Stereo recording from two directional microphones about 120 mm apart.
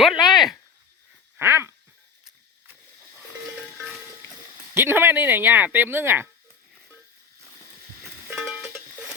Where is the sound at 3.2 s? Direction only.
Centre (ahead or behind).